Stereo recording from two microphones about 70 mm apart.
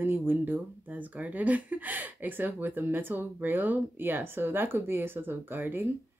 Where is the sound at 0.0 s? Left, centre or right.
Right.